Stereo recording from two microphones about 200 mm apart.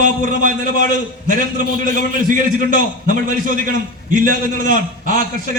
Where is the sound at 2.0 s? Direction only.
40° right (ahead or behind).